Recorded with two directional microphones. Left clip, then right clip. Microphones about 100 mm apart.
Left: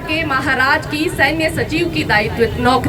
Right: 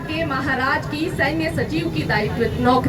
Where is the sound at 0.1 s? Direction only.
25° left (ahead or behind).